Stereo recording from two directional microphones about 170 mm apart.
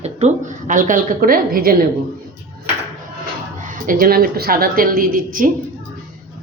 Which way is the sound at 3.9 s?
60° right (ahead or behind).